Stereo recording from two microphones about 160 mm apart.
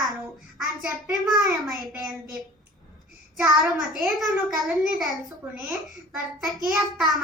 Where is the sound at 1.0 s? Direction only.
25° right (ahead or behind).